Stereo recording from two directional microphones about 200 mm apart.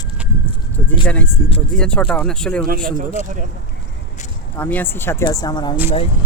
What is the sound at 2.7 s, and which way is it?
Speech, 45° right (ahead or behind).